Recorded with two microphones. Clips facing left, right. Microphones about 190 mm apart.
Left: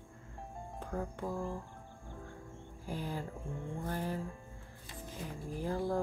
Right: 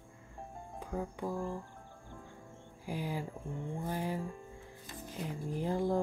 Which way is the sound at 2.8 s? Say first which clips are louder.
Right 2 dB; 10° right (ahead or behind).